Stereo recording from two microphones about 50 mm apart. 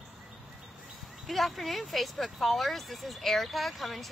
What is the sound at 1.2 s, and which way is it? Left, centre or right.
Speech, centre.